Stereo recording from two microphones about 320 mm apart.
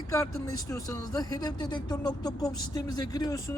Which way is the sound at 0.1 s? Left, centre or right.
Centre.